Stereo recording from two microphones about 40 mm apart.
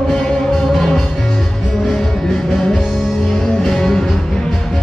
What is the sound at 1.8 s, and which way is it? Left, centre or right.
Music, centre.